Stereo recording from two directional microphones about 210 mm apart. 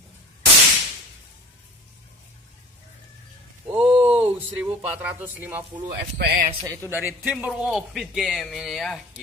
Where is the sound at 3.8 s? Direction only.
30° right (ahead or behind).